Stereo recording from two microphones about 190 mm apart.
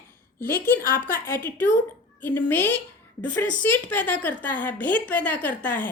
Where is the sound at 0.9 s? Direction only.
50° left (ahead or behind).